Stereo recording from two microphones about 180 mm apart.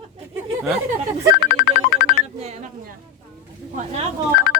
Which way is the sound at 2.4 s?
35° right (ahead or behind).